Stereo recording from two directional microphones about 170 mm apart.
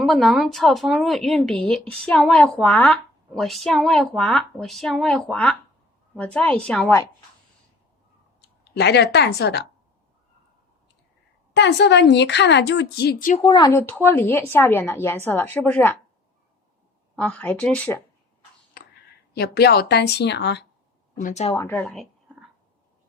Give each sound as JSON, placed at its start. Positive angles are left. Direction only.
{"t": 0.0, "sound": "a woman's voice", "side_deg": 0}
{"t": 8.7, "sound": "speech", "side_deg": 75}
{"t": 11.5, "sound": "a woman's voice", "side_deg": 90}
{"t": 13.4, "sound": "speech", "side_deg": 25}
{"t": 17.2, "sound": "speech", "side_deg": 5}
{"t": 19.3, "sound": "speech", "side_deg": 70}
{"t": 21.2, "sound": "speech", "side_deg": 50}
{"t": 21.5, "sound": "speech", "side_deg": 20}
{"t": 21.8, "sound": "a sound", "side_deg": 0}